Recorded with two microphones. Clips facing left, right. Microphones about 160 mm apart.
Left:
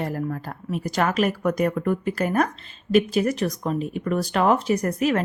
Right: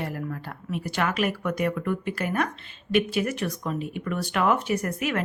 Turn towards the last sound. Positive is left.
turn(degrees=35)  # may be behind; listen again after turning